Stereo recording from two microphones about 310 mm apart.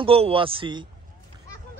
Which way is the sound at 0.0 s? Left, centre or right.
Centre.